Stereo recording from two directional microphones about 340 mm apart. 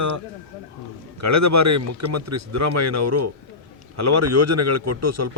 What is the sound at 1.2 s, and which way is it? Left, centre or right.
Speech, right.